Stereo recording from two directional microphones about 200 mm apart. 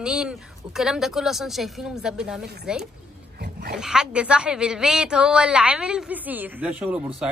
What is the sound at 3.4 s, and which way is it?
Dog, 55° right (ahead or behind).